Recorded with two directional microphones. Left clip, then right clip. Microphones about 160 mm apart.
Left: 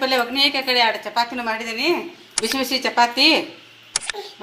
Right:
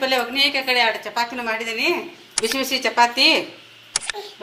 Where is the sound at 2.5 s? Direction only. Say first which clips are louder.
Even; 50° left (ahead or behind).